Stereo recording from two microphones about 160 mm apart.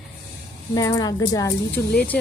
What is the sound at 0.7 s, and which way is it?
Speech, 25° left (ahead or behind).